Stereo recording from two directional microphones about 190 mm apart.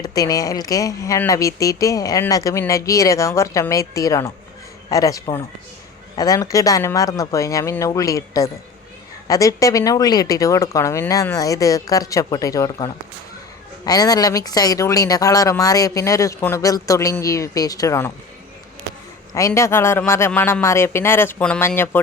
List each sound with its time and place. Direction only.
0.0 s speech: 20° left (ahead or behind)
19.3 s speech: 15° left (ahead or behind)